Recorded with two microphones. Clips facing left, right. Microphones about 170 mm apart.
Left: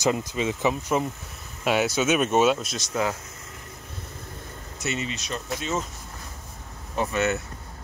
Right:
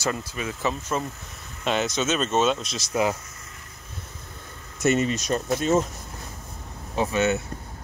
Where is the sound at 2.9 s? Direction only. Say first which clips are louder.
Right 3 dB; 15° right (ahead or behind).